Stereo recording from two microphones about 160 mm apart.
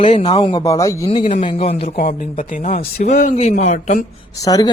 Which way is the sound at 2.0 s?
55° left (ahead or behind).